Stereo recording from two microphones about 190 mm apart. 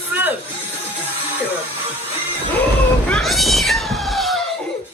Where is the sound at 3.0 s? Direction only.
5° left (ahead or behind).